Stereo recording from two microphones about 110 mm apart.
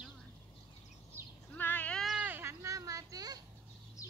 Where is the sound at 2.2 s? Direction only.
20° right (ahead or behind); by 3.4 s 35° right (ahead or behind).